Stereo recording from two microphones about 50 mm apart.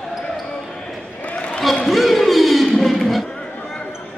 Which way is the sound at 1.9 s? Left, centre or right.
Centre.